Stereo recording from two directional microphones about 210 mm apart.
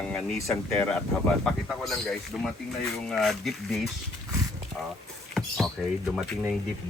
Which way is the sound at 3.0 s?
Centre (ahead or behind).